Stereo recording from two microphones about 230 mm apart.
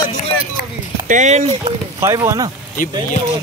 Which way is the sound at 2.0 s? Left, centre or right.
Centre.